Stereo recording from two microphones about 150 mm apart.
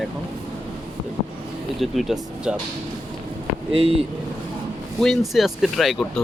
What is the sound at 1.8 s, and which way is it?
Speech, centre (ahead or behind).